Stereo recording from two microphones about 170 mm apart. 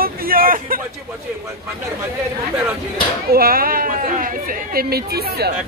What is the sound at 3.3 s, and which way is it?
Speech, 60° right (ahead or behind).